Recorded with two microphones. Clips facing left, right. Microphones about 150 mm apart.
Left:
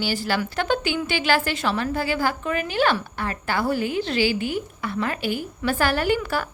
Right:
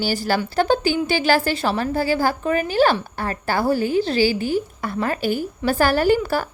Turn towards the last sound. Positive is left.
turn(degrees=-35)  # may be behind; listen again after turning